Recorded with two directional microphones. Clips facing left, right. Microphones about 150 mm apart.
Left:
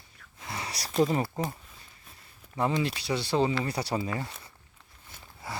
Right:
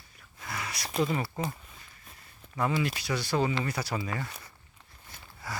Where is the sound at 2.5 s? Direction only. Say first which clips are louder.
Left 1 dB; 25° left (ahead or behind).